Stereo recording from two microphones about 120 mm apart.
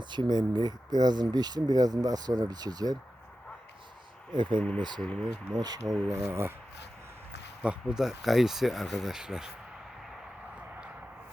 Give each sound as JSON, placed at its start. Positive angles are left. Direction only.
{"t": 0.0, "sound": "speech", "side_deg": -40}
{"t": 4.3, "sound": "speech", "side_deg": -40}
{"t": 4.9, "sound": "speech", "side_deg": 5}
{"t": 5.5, "sound": "speech", "side_deg": -35}
{"t": 6.1, "sound": "speech", "side_deg": -25}
{"t": 7.6, "sound": "speech", "side_deg": -10}